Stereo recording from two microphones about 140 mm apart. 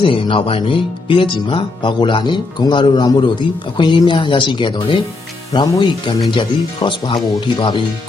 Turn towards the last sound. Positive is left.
turn(degrees=35)  # may be behind; listen again after turning